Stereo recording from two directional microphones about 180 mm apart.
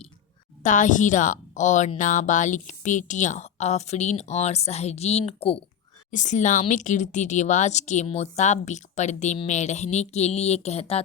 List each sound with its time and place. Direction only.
0.6 s a woman's voice: 45° left (ahead or behind)